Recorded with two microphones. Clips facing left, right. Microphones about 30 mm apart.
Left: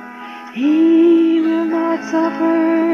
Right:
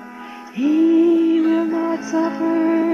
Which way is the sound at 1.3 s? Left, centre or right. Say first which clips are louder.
Left 2 dB; centre.